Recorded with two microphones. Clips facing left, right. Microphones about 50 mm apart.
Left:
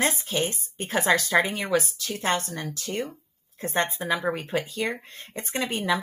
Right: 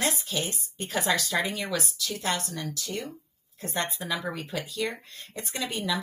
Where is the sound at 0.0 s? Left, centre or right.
Left.